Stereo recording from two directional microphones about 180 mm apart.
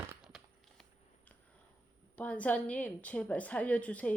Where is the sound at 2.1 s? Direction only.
5° left (ahead or behind).